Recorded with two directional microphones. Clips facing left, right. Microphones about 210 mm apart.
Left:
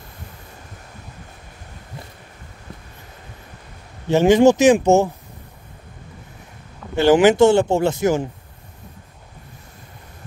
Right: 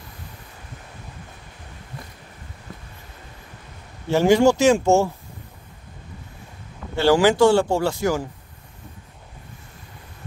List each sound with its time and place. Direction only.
4.1 s speech: 20° left (ahead or behind)
7.0 s speech: 20° left (ahead or behind)